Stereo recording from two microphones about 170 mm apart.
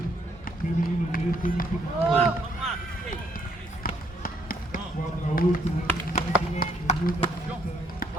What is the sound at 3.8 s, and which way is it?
Basketball bounce, 55° left (ahead or behind).